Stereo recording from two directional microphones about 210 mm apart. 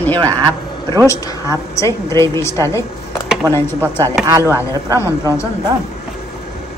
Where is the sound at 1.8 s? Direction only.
15° left (ahead or behind).